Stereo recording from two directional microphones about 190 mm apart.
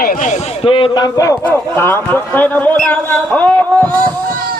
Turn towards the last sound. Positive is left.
turn(degrees=10)  # may be behind; listen again after turning